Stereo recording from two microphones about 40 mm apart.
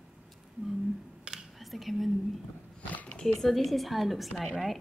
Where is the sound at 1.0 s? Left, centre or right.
Centre.